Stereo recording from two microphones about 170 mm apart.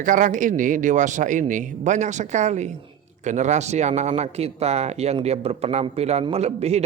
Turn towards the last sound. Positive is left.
turn(degrees=-40)  # may be behind; listen again after turning